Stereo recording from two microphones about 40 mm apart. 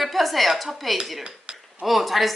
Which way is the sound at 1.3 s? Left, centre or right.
Right.